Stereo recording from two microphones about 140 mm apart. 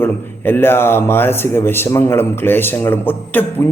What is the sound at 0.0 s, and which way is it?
Speech, 15° left (ahead or behind).